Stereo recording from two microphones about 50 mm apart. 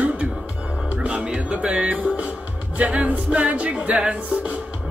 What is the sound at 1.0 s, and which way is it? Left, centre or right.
Music, right.